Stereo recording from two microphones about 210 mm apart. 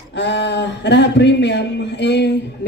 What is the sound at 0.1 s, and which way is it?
A woman's voice, 55° left (ahead or behind).